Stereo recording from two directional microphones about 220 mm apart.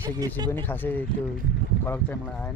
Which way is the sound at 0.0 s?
15° right (ahead or behind).